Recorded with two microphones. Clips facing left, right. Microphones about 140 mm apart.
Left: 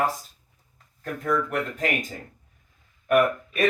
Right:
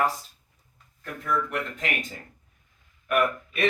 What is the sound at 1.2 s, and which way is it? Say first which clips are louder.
Speech: left 3 dB; 45° left (ahead or behind).